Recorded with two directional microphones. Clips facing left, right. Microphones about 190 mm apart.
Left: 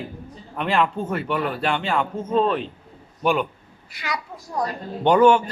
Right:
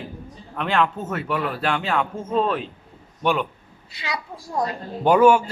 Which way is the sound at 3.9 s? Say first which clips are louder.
Even; 25° right (ahead or behind).